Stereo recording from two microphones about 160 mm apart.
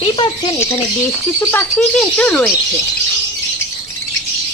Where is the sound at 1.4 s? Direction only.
15° left (ahead or behind).